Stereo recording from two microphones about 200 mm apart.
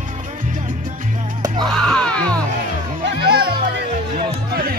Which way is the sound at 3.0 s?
50° right (ahead or behind).